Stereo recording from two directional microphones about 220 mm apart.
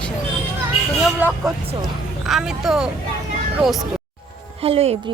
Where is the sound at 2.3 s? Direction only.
Centre (ahead or behind).